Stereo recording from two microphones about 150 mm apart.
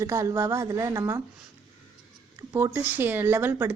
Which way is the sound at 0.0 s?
20° right (ahead or behind).